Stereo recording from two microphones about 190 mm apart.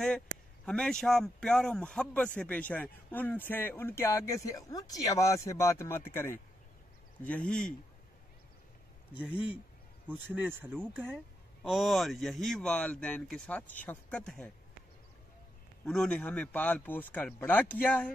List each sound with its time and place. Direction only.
0.7 s speech: 5° left (ahead or behind)
10.3 s speech: 10° right (ahead or behind)
15.8 s speech: 5° left (ahead or behind)